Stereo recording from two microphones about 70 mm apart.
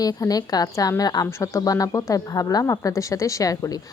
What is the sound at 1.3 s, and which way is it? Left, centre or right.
Speech, left.